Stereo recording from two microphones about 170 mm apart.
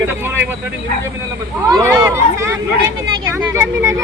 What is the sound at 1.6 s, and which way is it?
Speech, 20° right (ahead or behind).